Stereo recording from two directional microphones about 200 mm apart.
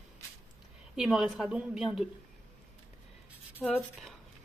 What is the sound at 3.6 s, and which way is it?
Speech, 5° left (ahead or behind).